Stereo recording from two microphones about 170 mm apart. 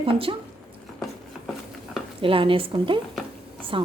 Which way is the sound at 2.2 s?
30° right (ahead or behind).